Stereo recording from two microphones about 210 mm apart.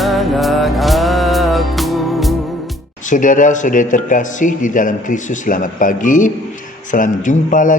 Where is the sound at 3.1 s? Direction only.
40° left (ahead or behind).